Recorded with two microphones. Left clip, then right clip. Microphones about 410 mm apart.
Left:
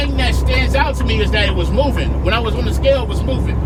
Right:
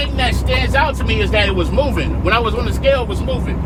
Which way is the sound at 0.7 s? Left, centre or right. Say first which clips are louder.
Right 1 dB; centre.